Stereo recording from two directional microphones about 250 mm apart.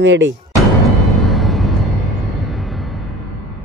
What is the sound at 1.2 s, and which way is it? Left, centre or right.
Vehicle, centre.